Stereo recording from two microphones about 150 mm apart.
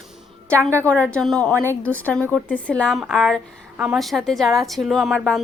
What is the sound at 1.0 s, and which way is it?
A woman's voice, 5° left (ahead or behind).